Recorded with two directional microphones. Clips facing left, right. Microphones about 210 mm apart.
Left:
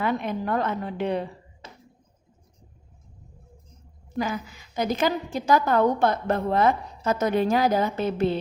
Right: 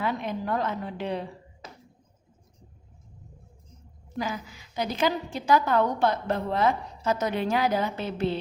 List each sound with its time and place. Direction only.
0.0 s a woman's voice: 55° left (ahead or behind)
4.2 s a woman's voice: 50° left (ahead or behind)